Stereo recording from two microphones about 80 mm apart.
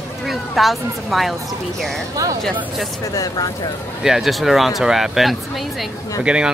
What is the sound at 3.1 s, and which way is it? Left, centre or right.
Speech, left.